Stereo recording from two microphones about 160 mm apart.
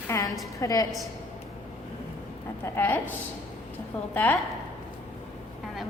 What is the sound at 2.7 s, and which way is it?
Speech, 15° left (ahead or behind).